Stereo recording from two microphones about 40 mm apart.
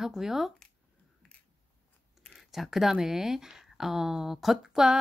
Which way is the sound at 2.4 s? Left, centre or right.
Centre.